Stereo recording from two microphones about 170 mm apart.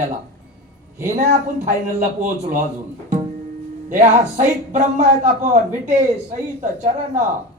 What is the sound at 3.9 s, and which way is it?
Speech, 45° right (ahead or behind).